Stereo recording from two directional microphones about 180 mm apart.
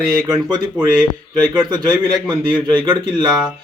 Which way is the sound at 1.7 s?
20° right (ahead or behind).